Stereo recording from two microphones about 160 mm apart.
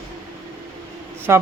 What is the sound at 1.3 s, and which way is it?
Speech, 15° right (ahead or behind).